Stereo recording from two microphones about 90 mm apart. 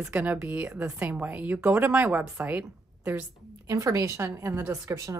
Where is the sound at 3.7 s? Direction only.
35° right (ahead or behind).